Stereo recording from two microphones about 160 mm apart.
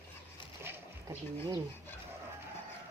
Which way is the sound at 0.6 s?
15° right (ahead or behind).